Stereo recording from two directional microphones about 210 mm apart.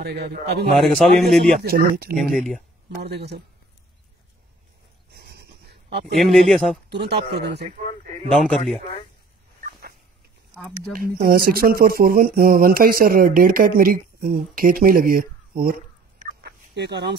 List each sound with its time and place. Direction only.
0.0 s speech: 50° right (ahead or behind)
0.7 s a man's voice: centre (ahead or behind)
1.6 s speech: 45° right (ahead or behind)
2.1 s a man's voice: 5° left (ahead or behind)
3.0 s speech: 55° right (ahead or behind)
5.1 s a sound: 50° right (ahead or behind)
6.1 s a man's voice: centre (ahead or behind)
6.9 s speech: 50° right (ahead or behind)
8.3 s a man's voice: centre (ahead or behind)
9.6 s a sound: 40° right (ahead or behind)
10.9 s speech: 45° right (ahead or behind)
16.2 s fowl: 45° right (ahead or behind)